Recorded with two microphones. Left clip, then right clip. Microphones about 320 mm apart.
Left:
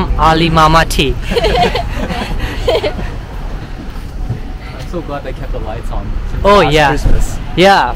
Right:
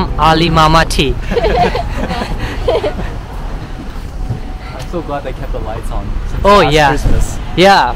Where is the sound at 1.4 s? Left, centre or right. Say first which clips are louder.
Even; left.